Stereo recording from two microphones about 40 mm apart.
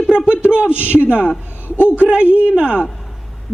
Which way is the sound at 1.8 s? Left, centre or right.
Left.